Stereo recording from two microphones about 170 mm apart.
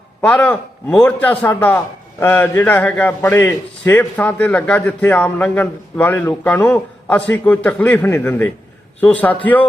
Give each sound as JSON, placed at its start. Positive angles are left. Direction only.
{"t": 0.2, "sound": "a man's voice", "side_deg": 10}